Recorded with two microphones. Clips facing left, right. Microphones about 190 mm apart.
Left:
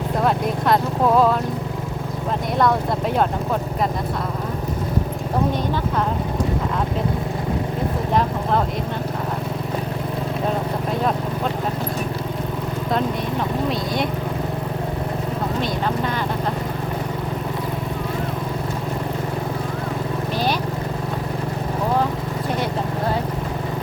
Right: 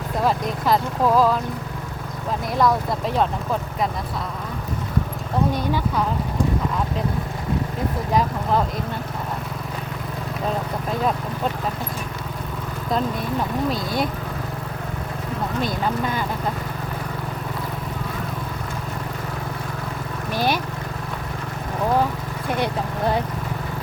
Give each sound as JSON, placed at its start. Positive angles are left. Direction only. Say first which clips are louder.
{"t": 0.2, "sound": "speech", "louder": "left 1 dB", "side_deg": 0}
{"t": 13.7, "sound": "speech", "louder": "left 1 dB", "side_deg": 0}